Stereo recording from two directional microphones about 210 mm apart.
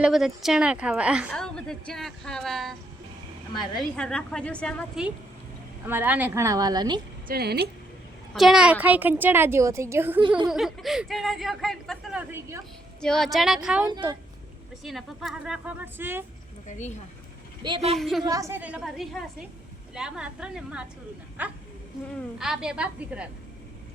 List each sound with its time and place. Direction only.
0.0 s speech: centre (ahead or behind)
3.9 s a woman's voice: 5° left (ahead or behind); by 7.0 s 20° right (ahead or behind)
7.3 s speech: 50° right (ahead or behind)
8.3 s a woman's voice: centre (ahead or behind)
12.3 s a woman's voice: 15° right (ahead or behind)
13.0 s speech: centre (ahead or behind)
13.8 s speech: 20° right (ahead or behind)
14.8 s speech: centre (ahead or behind)
16.6 s speech: 35° left (ahead or behind)
17.6 s speech: 25° right (ahead or behind)
17.9 s speech: centre (ahead or behind)
18.2 s a woman's voice: 15° right (ahead or behind)